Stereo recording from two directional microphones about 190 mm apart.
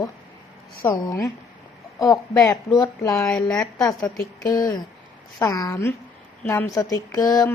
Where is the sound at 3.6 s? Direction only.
20° left (ahead or behind).